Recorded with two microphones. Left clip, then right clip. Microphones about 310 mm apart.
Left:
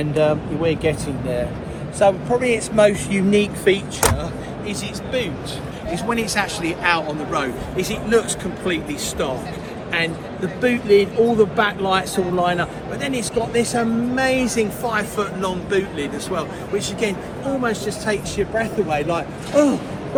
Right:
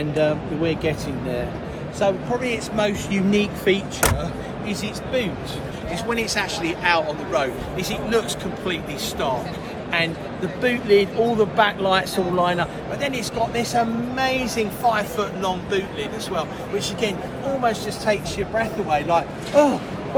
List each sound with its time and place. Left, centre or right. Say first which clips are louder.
0.0 s speech: left 3 dB; left
2.0 s speech: left 5 dB; centre
6.1 s speech: left 2 dB; centre
7.8 s speech: left 4 dB; centre
10.6 s speech: left 2 dB; right